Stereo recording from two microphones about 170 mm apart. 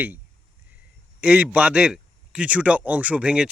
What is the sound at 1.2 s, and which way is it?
Speech, 5° right (ahead or behind).